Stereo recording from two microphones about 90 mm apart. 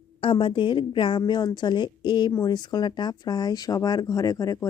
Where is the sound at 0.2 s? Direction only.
75° left (ahead or behind).